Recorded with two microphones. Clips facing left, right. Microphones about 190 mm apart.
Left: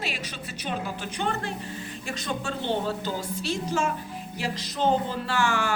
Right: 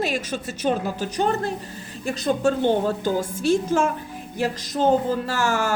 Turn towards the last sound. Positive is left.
turn(degrees=-40)  # may be behind; listen again after turning